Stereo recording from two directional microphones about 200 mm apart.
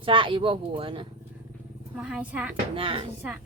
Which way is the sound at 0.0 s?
25° right (ahead or behind).